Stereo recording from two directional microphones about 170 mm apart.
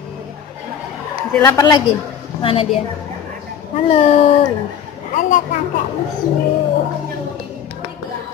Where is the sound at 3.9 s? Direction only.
35° left (ahead or behind).